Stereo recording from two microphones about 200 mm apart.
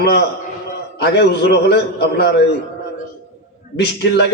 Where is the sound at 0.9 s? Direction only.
55° left (ahead or behind).